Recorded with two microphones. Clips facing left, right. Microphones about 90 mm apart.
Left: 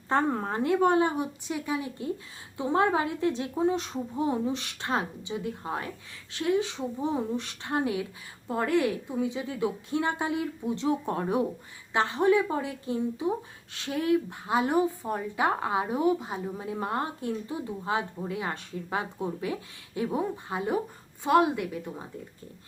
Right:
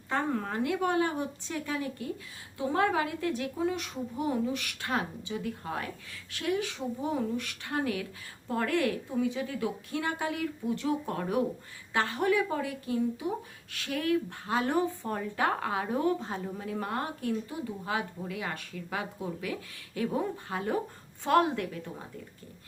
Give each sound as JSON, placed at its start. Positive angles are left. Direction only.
{"t": 0.1, "sound": "a woman's voice", "side_deg": 30}
{"t": 1.1, "sound": "a woman's voice", "side_deg": 15}